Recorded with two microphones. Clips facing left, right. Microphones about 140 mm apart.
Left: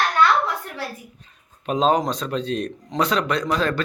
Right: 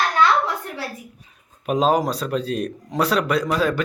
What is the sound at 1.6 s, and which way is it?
A man's voice, 5° right (ahead or behind).